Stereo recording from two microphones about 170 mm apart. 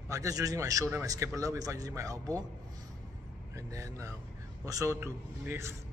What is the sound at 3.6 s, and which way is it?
A man's voice, 20° right (ahead or behind).